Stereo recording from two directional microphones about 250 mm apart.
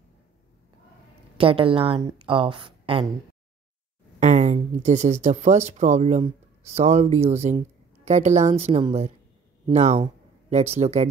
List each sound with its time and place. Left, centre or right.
1.4 s a woman's voice: right
4.2 s a woman's voice: right